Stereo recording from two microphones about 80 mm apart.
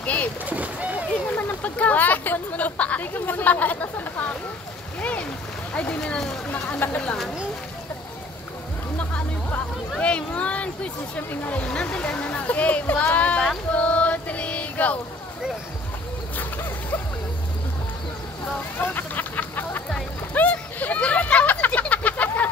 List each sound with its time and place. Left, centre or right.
0.0 s boat: centre
0.5 s speech: centre
1.3 s speech: centre
5.7 s speech: centre
6.8 s speech: left
9.1 s speech: centre
13.7 s female singing: centre
18.8 s a sound: left